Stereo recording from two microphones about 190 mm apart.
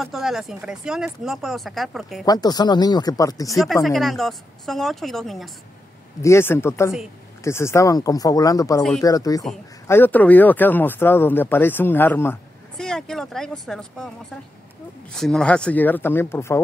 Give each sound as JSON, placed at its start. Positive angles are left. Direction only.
{"t": 0.0, "sound": "speech", "side_deg": 0}
{"t": 2.2, "sound": "speech", "side_deg": 20}
{"t": 3.8, "sound": "speech", "side_deg": 0}
{"t": 6.2, "sound": "speech", "side_deg": 15}
{"t": 15.1, "sound": "speech", "side_deg": 5}